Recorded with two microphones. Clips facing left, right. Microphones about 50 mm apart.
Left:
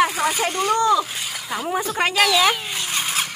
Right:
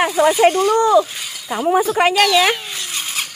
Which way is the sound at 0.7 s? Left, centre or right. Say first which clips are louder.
Right 5 dB; right.